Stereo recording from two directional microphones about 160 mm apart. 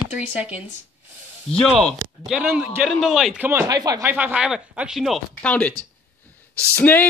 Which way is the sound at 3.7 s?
25° right (ahead or behind).